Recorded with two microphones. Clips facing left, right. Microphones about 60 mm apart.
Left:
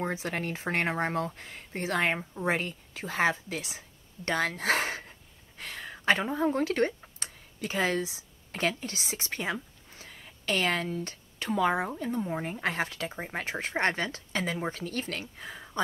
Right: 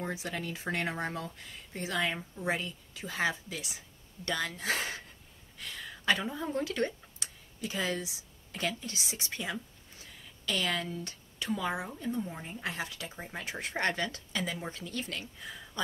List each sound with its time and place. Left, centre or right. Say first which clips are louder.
0.0 s a woman's voice: left 4 dB; left
4.6 s speech: left 5 dB; left
8.5 s speech: left 5 dB; left
10.0 s a sound: left 5 dB; left
11.1 s a woman's voice: left 2 dB; left
14.4 s a woman's voice: left 6 dB; left
15.4 s a sound: left 4 dB; left